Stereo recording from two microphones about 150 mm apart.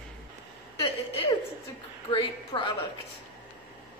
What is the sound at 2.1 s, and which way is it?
Speech, 30° left (ahead or behind).